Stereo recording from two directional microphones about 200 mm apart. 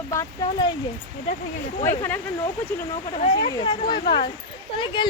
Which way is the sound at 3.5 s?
20° left (ahead or behind).